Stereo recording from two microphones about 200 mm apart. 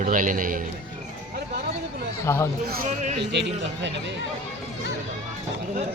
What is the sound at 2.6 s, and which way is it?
Speech, 40° right (ahead or behind).